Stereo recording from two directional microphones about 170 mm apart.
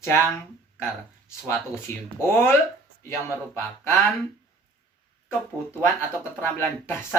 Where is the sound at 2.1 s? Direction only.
15° left (ahead or behind).